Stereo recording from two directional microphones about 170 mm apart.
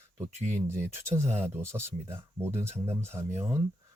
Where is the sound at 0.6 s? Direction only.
15° right (ahead or behind).